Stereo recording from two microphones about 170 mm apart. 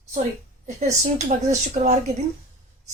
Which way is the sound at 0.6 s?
45° right (ahead or behind).